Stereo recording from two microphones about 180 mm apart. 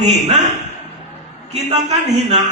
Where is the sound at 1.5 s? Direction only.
35° right (ahead or behind).